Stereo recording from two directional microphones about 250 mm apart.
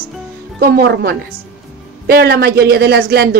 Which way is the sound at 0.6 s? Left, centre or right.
Right.